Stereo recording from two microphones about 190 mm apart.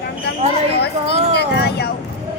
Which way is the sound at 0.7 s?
60° left (ahead or behind).